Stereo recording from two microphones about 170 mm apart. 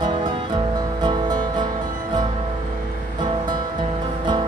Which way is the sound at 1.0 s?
25° right (ahead or behind).